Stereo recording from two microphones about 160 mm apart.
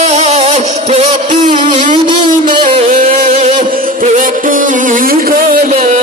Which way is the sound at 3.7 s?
60° right (ahead or behind).